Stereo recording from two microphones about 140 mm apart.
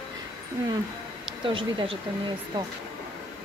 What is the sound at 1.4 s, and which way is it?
Speech, 40° right (ahead or behind).